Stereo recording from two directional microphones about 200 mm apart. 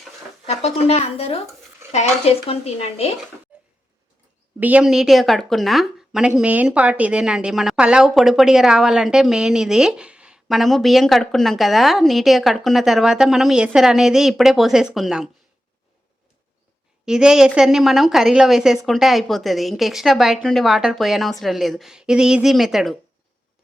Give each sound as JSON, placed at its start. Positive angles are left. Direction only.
{"t": 0.4, "sound": "speech", "side_deg": 30}
{"t": 4.6, "sound": "speech", "side_deg": -5}
{"t": 17.1, "sound": "speech", "side_deg": -5}